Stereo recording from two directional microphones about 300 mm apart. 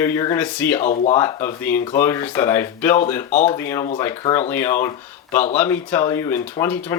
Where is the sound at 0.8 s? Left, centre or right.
Left.